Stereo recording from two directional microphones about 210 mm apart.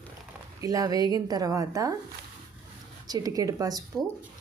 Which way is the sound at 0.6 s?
15° right (ahead or behind).